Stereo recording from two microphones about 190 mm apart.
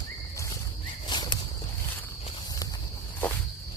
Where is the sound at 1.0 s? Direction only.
25° left (ahead or behind).